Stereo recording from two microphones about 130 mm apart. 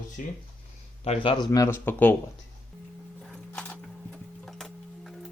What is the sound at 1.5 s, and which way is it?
Speech, 20° left (ahead or behind).